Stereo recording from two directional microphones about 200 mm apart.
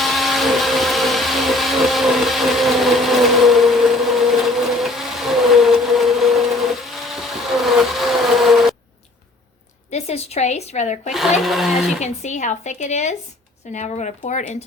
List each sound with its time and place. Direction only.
0.0 s blender: centre (ahead or behind)
9.9 s a woman's voice: 30° left (ahead or behind)
11.3 s speech: centre (ahead or behind)
11.9 s speech: 35° left (ahead or behind)